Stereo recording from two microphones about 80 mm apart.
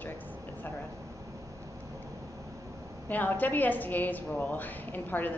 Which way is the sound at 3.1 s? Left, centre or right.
Left.